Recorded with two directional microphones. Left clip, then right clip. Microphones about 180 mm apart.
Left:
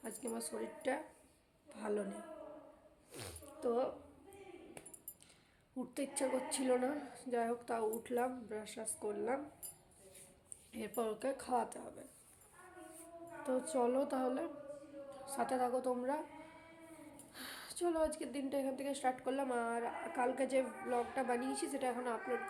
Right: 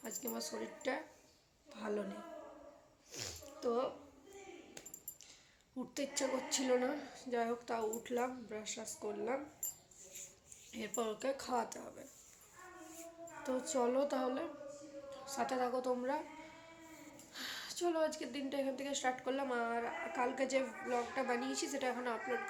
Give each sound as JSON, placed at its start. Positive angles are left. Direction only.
{"t": 0.0, "sound": "speech", "side_deg": 5}
{"t": 3.1, "sound": "a sound", "side_deg": 5}
{"t": 5.7, "sound": "a woman's voice", "side_deg": 5}
{"t": 10.7, "sound": "speech", "side_deg": 5}
{"t": 13.4, "sound": "a woman's voice", "side_deg": 5}
{"t": 17.3, "sound": "a woman's voice", "side_deg": 5}